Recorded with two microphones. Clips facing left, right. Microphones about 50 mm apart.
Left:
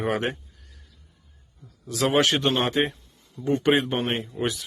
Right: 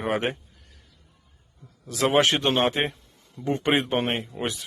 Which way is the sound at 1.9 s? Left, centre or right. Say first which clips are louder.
Right 1 dB; centre.